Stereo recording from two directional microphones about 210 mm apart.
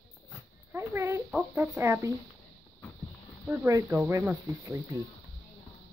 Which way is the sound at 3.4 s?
10° right (ahead or behind).